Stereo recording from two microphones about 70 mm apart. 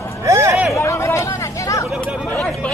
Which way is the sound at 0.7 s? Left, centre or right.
Left.